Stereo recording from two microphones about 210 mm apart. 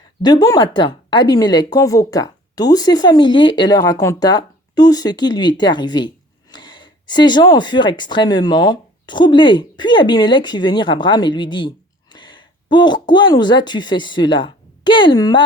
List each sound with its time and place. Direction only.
0.2 s speech: 20° left (ahead or behind)